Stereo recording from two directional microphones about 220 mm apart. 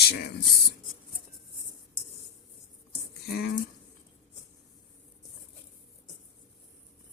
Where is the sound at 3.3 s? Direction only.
45° left (ahead or behind).